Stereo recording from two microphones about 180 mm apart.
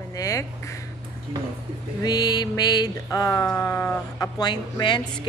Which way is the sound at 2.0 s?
20° left (ahead or behind).